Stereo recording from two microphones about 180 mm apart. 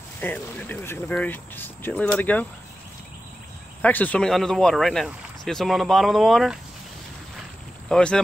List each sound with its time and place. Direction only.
0.2 s speech: 10° left (ahead or behind)
3.8 s speech: 10° left (ahead or behind)
7.9 s speech: 5° left (ahead or behind)